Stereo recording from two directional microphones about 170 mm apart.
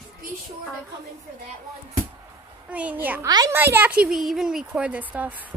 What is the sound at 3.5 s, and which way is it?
Speech, 10° right (ahead or behind).